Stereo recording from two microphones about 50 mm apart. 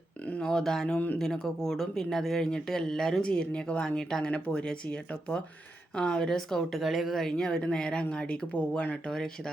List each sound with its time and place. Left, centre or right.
0.4 s speech: centre
0.9 s speech: left
1.2 s speech: centre
6.7 s speech: centre; by 9.0 s left
9.0 s speech: centre